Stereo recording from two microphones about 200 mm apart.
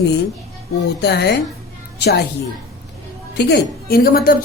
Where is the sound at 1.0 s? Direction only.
55° left (ahead or behind).